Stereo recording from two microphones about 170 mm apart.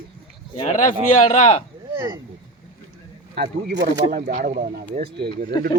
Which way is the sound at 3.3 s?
80° right.